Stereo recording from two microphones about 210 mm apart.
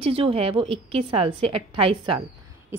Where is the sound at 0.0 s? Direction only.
25° right (ahead or behind).